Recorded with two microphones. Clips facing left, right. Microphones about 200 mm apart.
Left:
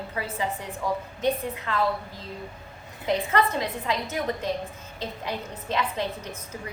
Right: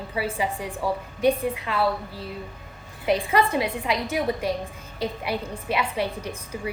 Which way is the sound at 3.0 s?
15° right (ahead or behind).